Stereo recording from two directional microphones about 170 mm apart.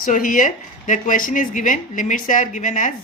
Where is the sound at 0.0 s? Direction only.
50° left (ahead or behind).